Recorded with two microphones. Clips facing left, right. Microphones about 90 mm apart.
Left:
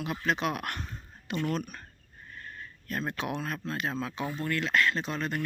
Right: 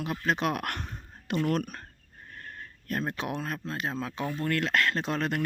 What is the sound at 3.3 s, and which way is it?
Speech, 40° right (ahead or behind).